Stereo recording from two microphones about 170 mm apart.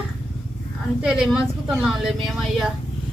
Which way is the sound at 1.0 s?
Centre (ahead or behind).